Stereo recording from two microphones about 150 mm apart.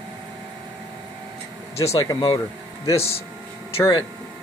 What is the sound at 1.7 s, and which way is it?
Speech, 40° left (ahead or behind).